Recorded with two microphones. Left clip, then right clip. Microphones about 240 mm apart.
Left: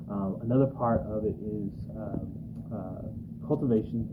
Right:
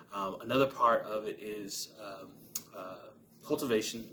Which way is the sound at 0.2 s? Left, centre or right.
Right.